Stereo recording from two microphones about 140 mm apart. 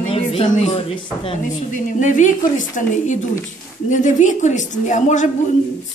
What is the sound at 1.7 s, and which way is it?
Speech, 65° left (ahead or behind).